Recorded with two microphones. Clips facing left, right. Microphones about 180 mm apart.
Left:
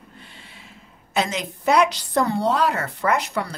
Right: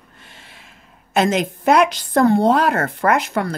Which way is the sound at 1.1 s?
50° right (ahead or behind).